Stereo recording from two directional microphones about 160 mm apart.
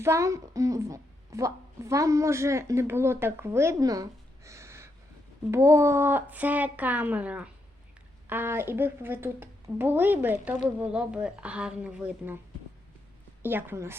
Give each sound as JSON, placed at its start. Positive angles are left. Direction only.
{"t": 0.0, "sound": "a woman's voice", "side_deg": -20}
{"t": 13.4, "sound": "a woman's voice", "side_deg": -15}